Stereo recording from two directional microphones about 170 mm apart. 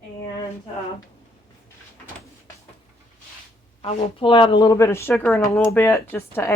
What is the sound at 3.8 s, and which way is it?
A woman's voice, 30° left (ahead or behind).